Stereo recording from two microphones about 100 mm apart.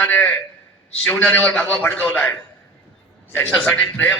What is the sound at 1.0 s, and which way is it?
A man's voice, 5° left (ahead or behind).